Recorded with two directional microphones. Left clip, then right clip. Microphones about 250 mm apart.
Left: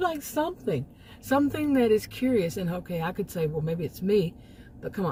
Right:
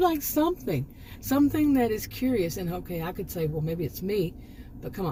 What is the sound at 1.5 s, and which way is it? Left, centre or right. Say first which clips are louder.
Speech: left 1 dB; left.